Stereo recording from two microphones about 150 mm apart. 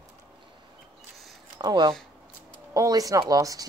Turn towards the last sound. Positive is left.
turn(degrees=-25)  # may be behind; listen again after turning